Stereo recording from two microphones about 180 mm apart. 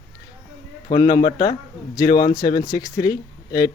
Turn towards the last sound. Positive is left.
turn(degrees=20)  # may be behind; listen again after turning